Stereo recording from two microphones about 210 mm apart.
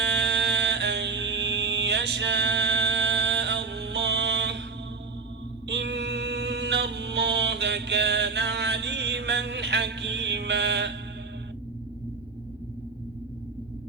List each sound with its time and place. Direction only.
0.0 s music: 55° right (ahead or behind)
5.6 s music: 55° right (ahead or behind)